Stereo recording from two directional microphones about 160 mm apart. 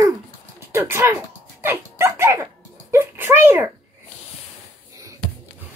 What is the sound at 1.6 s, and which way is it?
Dog, 15° right (ahead or behind).